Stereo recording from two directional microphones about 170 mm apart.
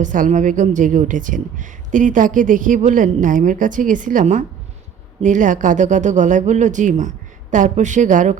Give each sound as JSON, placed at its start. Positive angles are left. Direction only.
{"t": 0.0, "sound": "a woman's voice", "side_deg": -50}